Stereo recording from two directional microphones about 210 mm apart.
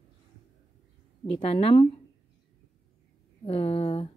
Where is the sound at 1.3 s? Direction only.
25° left (ahead or behind).